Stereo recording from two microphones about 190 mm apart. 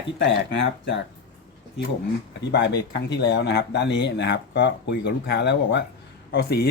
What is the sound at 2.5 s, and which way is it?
Speech, 65° left (ahead or behind).